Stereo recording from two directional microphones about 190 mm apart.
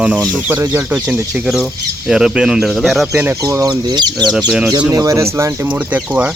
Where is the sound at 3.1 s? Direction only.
15° right (ahead or behind).